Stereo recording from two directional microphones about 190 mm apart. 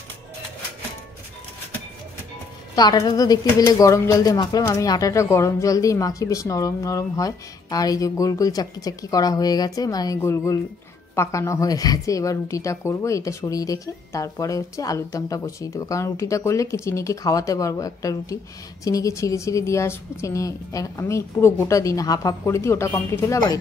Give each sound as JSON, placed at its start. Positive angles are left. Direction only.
{"t": 2.7, "sound": "a woman's voice", "side_deg": 20}